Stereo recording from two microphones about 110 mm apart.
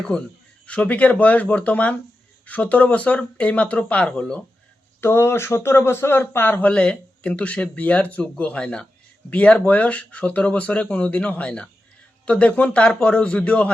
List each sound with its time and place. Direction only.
0.1 s speech: 5° left (ahead or behind)
4.9 s a man's voice: 20° left (ahead or behind)